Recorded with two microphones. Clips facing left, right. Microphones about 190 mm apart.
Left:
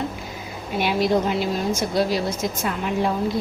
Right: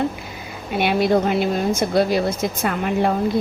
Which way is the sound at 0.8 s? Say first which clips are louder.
Right 3 dB; 60° right (ahead or behind).